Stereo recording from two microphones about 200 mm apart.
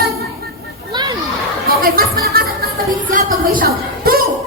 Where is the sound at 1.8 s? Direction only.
45° right (ahead or behind).